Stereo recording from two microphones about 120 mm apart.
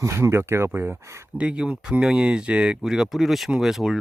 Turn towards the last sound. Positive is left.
turn(degrees=-5)  # may be behind; listen again after turning